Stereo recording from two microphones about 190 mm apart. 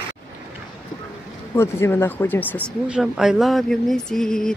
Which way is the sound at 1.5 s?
15° left (ahead or behind).